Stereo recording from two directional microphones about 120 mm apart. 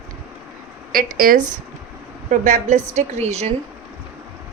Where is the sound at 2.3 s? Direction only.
90° right; by 3.5 s 65° right (ahead or behind).